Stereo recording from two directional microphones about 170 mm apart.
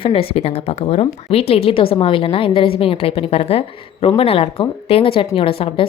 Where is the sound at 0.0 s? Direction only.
35° left (ahead or behind).